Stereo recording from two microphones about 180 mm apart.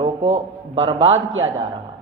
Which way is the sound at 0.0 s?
35° right (ahead or behind).